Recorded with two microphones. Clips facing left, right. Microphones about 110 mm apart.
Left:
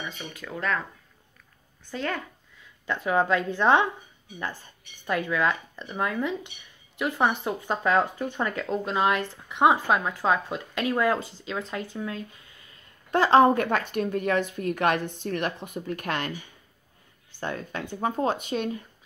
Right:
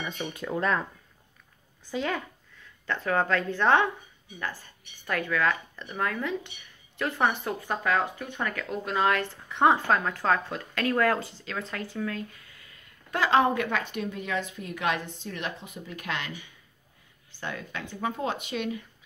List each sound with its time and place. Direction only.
0.2 s speech: 25° right (ahead or behind)
1.9 s a woman's voice: 5° right (ahead or behind)
2.9 s a woman's voice: 15° left (ahead or behind); by 16.3 s 50° left (ahead or behind)
17.4 s speech: 40° left (ahead or behind)